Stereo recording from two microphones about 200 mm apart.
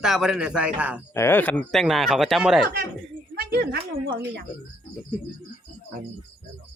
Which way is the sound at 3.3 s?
50° right (ahead or behind).